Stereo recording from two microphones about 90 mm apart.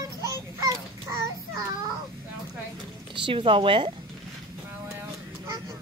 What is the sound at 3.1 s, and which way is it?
Speech, 70° right (ahead or behind).